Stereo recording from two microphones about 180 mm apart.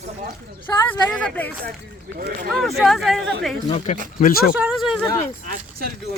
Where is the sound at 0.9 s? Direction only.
5° left (ahead or behind).